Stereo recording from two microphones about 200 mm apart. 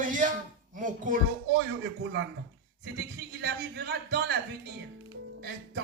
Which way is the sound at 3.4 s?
55° right (ahead or behind).